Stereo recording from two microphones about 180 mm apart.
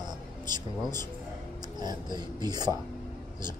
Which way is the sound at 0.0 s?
25° right (ahead or behind).